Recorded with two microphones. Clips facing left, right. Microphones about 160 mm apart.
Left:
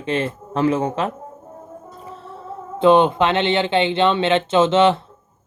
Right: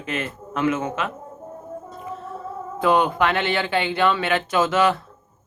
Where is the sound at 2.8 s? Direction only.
25° left (ahead or behind).